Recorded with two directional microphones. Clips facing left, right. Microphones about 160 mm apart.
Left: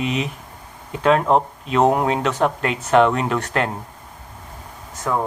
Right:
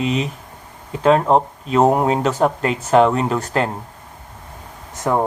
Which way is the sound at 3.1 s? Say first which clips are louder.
Right 2 dB; 35° right (ahead or behind).